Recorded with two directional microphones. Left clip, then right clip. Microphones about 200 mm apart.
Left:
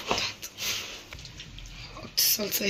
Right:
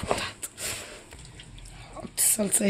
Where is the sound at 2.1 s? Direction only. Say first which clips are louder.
Left 2 dB; 55° right (ahead or behind).